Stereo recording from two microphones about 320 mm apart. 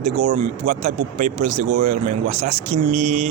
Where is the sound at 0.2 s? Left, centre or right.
Right.